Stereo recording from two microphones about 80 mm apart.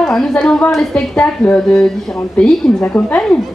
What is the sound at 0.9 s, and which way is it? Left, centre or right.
A woman's voice, centre.